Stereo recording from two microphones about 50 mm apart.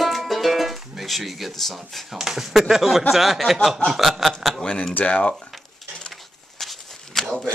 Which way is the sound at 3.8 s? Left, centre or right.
Centre.